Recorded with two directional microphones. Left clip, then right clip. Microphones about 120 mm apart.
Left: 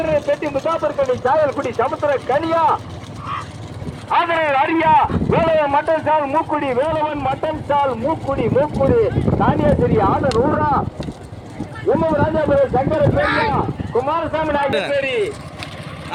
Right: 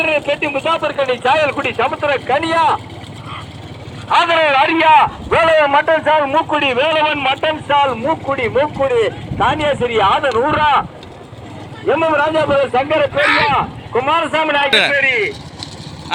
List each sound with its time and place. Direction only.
0.0 s speech: 35° right (ahead or behind)
4.1 s speech: 25° right (ahead or behind); by 10.8 s 10° right (ahead or behind)
11.9 s speech: 10° right (ahead or behind)
14.9 s speech: 55° right (ahead or behind)